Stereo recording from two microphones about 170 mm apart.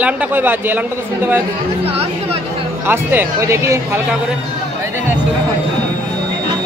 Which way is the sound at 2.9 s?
10° right (ahead or behind).